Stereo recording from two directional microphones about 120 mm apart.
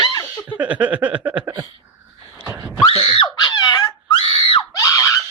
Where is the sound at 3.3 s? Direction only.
35° left (ahead or behind).